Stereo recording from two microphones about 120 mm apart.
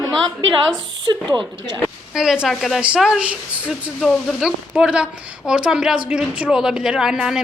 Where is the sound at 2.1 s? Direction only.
5° right (ahead or behind).